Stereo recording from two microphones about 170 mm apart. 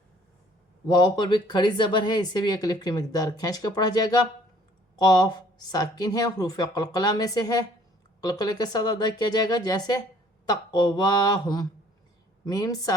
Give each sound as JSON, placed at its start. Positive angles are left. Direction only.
{"t": 0.9, "sound": "speech", "side_deg": 25}